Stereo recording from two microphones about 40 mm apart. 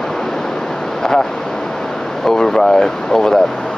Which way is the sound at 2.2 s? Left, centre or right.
Centre.